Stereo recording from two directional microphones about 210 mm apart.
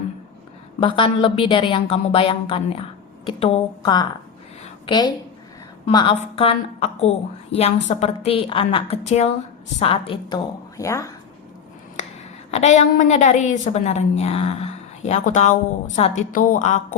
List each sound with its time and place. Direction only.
0.8 s a woman's voice: 25° left (ahead or behind)
12.5 s a woman's voice: 35° left (ahead or behind)